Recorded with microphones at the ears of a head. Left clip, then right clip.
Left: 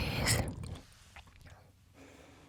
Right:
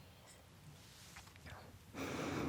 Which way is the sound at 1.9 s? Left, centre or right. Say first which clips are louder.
Right 14 dB; right.